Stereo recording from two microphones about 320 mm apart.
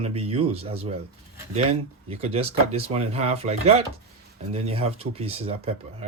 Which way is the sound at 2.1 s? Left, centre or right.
Centre.